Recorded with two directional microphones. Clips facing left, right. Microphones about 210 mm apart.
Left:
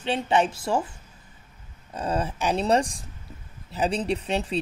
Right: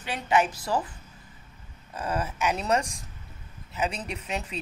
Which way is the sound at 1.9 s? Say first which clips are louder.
Left 3 dB; 30° left (ahead or behind).